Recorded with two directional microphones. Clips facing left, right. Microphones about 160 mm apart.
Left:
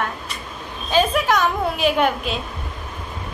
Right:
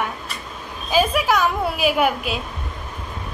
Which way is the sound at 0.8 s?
10° right (ahead or behind).